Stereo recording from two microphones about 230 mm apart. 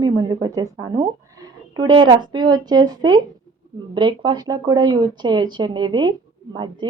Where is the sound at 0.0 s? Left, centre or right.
Centre.